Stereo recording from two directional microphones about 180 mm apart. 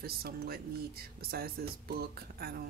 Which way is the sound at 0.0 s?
60° right (ahead or behind).